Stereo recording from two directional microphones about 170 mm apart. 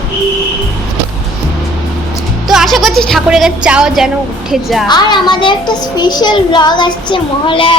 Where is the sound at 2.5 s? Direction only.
Centre (ahead or behind).